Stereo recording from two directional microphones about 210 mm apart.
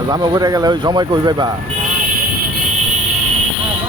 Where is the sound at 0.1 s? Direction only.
20° right (ahead or behind).